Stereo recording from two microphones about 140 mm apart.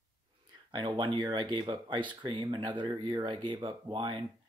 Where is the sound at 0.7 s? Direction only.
30° right (ahead or behind).